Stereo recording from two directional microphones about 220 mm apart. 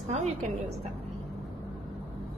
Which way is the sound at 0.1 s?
30° right (ahead or behind).